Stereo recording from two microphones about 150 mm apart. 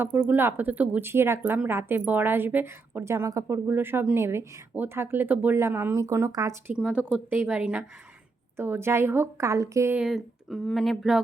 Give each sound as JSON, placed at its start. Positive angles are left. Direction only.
{"t": 0.0, "sound": "speech", "side_deg": -10}
{"t": 6.7, "sound": "speech", "side_deg": -5}
{"t": 10.0, "sound": "speech", "side_deg": 0}